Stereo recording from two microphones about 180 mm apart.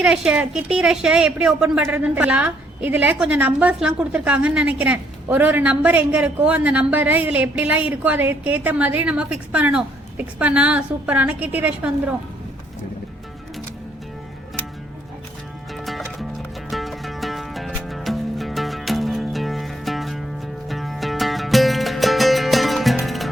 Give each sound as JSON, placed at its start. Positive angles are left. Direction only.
{"t": 0.0, "sound": "a woman's voice", "side_deg": -5}
{"t": 15.7, "sound": "music", "side_deg": 0}